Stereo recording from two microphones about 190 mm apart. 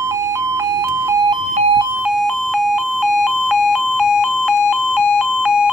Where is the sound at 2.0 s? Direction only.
Centre (ahead or behind).